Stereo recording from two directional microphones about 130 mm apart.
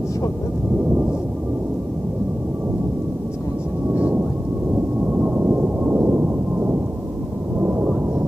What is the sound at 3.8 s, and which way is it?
Thunder, 10° right (ahead or behind).